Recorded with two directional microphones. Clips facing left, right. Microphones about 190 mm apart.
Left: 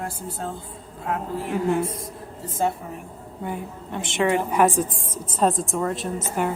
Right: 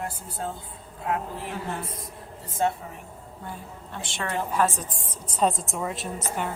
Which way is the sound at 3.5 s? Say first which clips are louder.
Left 8 dB; 20° left (ahead or behind).